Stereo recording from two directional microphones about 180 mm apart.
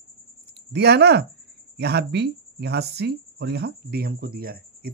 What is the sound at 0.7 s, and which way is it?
Speech, 65° right (ahead or behind).